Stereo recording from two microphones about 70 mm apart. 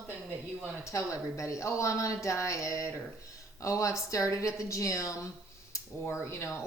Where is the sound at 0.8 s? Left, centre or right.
Left.